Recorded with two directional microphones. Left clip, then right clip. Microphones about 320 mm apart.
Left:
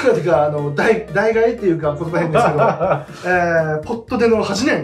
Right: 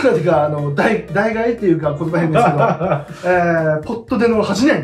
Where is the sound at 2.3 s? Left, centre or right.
Centre.